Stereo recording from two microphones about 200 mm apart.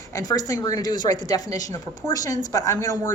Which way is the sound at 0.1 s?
20° left (ahead or behind).